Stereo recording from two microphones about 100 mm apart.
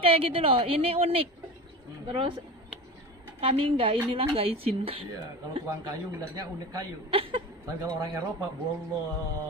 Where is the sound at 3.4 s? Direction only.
70° right (ahead or behind).